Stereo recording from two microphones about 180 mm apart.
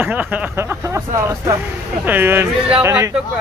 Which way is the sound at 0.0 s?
10° right (ahead or behind).